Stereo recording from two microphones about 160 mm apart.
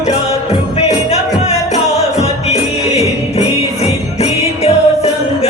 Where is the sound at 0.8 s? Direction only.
45° left (ahead or behind).